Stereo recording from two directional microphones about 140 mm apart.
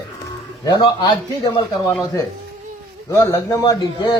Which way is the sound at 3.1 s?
20° left (ahead or behind).